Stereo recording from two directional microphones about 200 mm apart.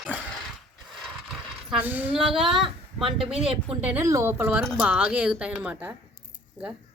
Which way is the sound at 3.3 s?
30° right (ahead or behind).